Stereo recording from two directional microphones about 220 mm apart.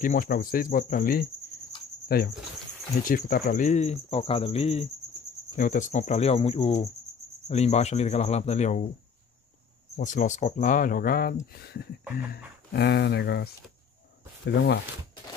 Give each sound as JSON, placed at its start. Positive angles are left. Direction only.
{"t": 0.0, "sound": "speech", "side_deg": 40}
{"t": 2.0, "sound": "cricket", "side_deg": 45}
{"t": 3.0, "sound": "speech", "side_deg": 40}
{"t": 9.9, "sound": "speech", "side_deg": 35}